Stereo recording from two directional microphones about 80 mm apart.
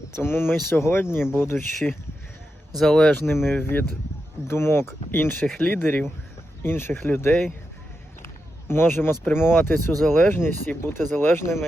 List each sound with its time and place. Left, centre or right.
0.2 s speech: left
2.7 s speech: centre
3.2 s speech: left
5.5 s speech: centre
5.8 s speech: left
8.2 s a sound: left
9.2 s speech: left